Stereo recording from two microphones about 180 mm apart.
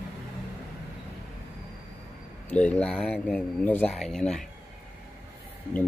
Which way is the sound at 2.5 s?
5° left (ahead or behind).